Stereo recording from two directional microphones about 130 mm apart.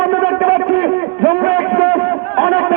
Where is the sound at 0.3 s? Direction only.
35° right (ahead or behind).